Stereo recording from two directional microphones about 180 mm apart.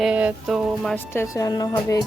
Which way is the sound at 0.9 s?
15° left (ahead or behind).